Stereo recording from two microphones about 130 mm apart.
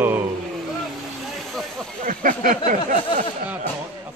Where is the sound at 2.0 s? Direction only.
90° right.